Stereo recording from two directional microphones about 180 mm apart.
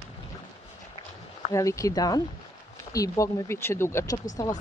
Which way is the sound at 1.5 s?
15° left (ahead or behind).